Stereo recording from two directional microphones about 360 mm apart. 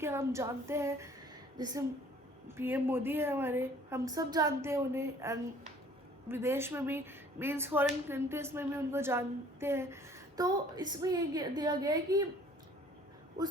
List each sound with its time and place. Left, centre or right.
0.0 s speech: centre